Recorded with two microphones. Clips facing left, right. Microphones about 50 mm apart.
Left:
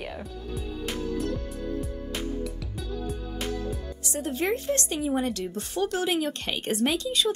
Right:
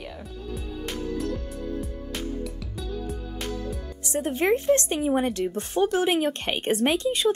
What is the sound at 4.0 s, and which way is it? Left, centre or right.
Speech, right.